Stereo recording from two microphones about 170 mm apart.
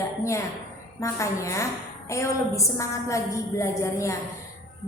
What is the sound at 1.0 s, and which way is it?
A woman's voice, 20° left (ahead or behind).